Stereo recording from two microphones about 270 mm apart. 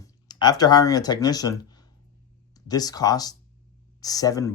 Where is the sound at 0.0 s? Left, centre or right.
Centre.